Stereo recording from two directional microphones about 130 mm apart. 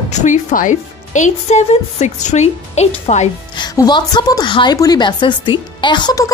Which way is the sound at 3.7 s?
30° left (ahead or behind).